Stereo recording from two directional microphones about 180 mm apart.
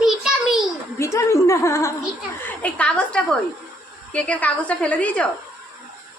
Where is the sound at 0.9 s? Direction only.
15° left (ahead or behind).